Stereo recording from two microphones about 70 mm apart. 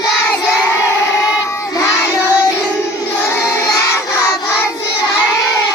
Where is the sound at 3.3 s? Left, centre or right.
Left.